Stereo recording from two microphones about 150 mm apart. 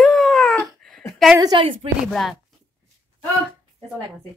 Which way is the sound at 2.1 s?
5° left (ahead or behind).